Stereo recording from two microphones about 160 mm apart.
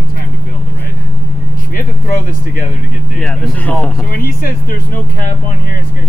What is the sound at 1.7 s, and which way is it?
Speech, 55° left (ahead or behind).